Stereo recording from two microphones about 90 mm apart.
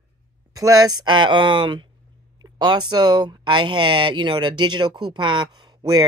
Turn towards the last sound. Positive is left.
turn(degrees=-50)  # may be behind; listen again after turning